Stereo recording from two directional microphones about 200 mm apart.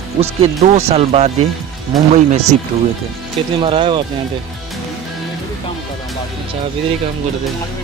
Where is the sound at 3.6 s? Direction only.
25° right (ahead or behind).